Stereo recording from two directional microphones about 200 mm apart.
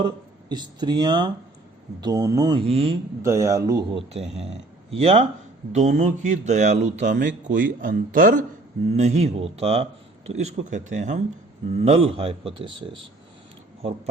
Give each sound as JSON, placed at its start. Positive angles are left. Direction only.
{"t": 0.0, "sound": "a man's voice", "side_deg": -20}
{"t": 2.6, "sound": "speech", "side_deg": -30}
{"t": 3.2, "sound": "a man's voice", "side_deg": -15}